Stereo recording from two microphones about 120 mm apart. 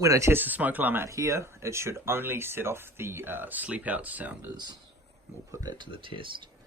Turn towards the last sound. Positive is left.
turn(degrees=-45)  # may be behind; listen again after turning